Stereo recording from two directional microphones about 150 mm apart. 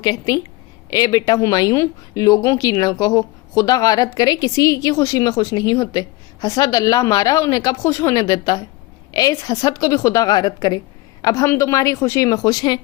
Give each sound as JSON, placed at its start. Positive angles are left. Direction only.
{"t": 0.0, "sound": "speech", "side_deg": 25}